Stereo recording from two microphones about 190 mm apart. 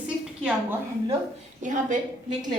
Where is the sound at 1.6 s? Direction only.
40° right (ahead or behind).